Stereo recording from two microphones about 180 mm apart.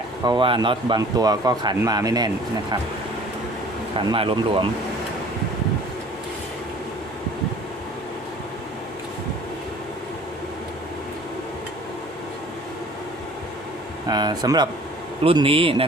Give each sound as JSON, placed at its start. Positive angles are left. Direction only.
{"t": 0.3, "sound": "speech", "side_deg": -25}
{"t": 3.9, "sound": "speech", "side_deg": -30}
{"t": 14.1, "sound": "a man's voice", "side_deg": -20}